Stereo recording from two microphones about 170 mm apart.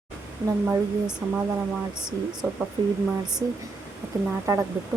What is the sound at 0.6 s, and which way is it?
Speech, 5° right (ahead or behind).